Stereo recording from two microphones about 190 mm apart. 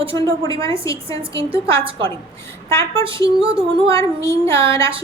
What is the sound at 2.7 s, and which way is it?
Speech, 15° left (ahead or behind).